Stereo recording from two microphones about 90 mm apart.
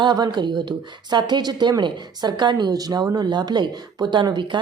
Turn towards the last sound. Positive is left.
turn(degrees=-60)  # may be behind; listen again after turning